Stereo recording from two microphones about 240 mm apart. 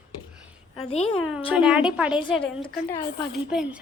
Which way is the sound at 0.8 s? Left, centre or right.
Left.